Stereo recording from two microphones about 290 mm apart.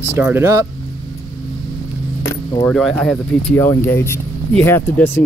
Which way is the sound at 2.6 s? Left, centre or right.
Centre.